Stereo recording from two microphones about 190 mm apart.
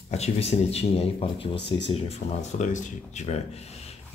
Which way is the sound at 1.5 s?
65° left (ahead or behind).